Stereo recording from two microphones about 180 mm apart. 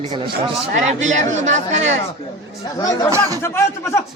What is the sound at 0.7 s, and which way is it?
Speech, 40° right (ahead or behind).